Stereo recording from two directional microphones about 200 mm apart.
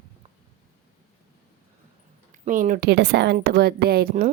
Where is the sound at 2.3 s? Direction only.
40° right (ahead or behind).